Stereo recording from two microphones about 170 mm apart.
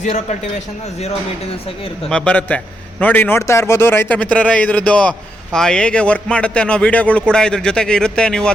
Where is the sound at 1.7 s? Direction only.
35° left (ahead or behind).